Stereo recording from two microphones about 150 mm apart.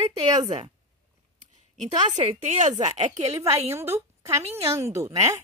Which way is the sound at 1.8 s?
50° right (ahead or behind).